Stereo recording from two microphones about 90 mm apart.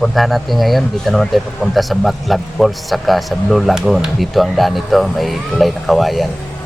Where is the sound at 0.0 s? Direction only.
Centre (ahead or behind).